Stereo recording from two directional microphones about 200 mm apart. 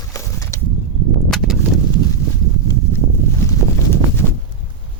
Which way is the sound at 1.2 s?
Centre (ahead or behind).